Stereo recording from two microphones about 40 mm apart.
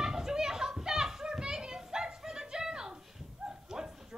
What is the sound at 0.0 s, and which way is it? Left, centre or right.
Children playing, centre.